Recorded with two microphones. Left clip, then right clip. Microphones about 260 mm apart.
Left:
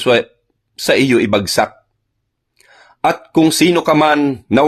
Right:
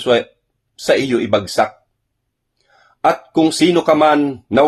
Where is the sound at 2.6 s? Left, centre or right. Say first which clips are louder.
Left 1 dB; left.